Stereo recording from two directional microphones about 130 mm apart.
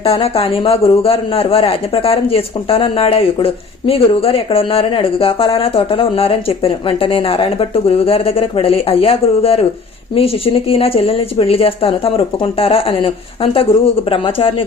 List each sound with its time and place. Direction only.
0.0 s a man's voice: 45° left (ahead or behind)